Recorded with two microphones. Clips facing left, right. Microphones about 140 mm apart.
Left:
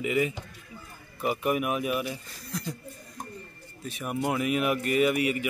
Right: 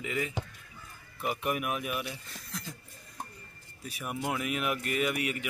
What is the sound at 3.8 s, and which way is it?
A man's voice, 5° right (ahead or behind).